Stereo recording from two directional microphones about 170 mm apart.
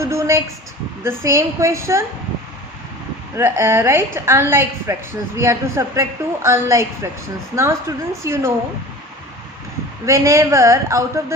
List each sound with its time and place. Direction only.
0.0 s a sound: 15° right (ahead or behind)
1.0 s a woman's voice: 15° right (ahead or behind)
3.3 s a woman's voice: 15° right (ahead or behind)
10.1 s a woman's voice: 20° right (ahead or behind)